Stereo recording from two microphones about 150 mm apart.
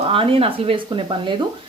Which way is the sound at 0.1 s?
35° right (ahead or behind).